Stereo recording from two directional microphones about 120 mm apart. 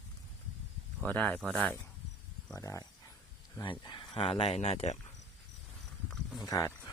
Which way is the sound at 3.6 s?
40° left (ahead or behind).